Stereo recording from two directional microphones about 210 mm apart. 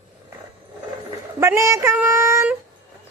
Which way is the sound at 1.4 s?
15° right (ahead or behind).